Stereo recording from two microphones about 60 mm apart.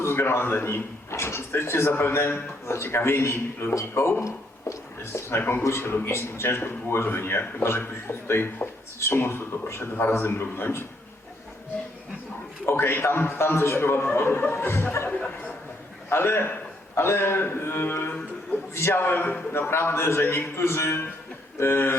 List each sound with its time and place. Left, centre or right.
0.0 s speech: left
12.6 s speech: left
15.1 s speech: left
16.0 s a man's voice: left